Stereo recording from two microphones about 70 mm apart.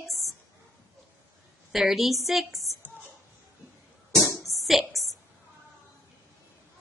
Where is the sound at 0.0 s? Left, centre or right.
Left.